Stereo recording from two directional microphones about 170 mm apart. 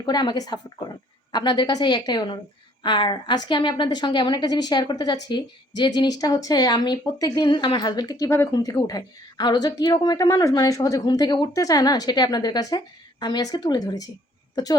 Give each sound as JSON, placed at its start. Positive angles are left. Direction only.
{"t": 0.0, "sound": "speech", "side_deg": 25}